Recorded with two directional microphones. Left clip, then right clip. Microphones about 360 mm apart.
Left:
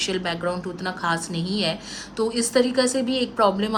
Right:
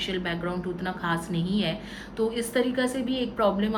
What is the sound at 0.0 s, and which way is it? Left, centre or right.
A woman's voice, centre.